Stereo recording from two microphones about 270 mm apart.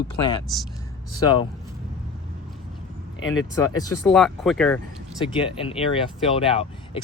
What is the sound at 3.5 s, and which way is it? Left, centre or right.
Speech, centre.